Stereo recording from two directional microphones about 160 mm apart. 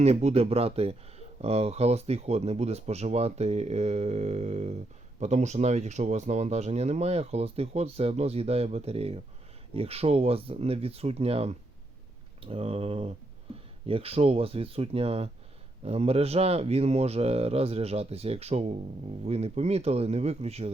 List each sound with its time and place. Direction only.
0.0 s speech: 45° right (ahead or behind)